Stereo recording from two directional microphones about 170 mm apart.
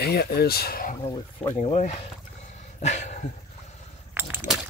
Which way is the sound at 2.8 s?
45° left (ahead or behind).